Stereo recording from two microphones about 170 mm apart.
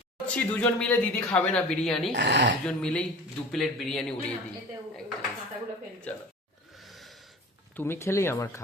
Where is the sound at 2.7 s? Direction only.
5° left (ahead or behind).